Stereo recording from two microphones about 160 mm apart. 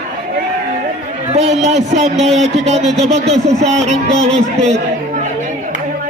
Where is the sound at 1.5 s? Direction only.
45° right (ahead or behind).